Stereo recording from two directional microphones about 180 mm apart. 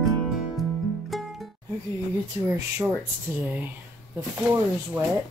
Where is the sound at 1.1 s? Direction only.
Centre (ahead or behind).